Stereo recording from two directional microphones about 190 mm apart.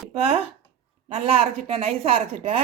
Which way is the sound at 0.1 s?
30° right (ahead or behind).